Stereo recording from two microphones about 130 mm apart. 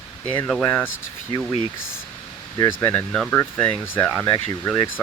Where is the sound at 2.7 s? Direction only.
15° left (ahead or behind).